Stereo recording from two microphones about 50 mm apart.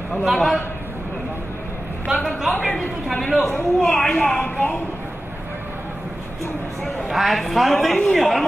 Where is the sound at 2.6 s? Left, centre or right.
Centre.